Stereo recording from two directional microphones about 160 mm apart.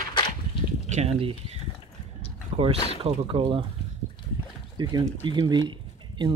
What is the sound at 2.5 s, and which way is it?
Boat, 45° right (ahead or behind).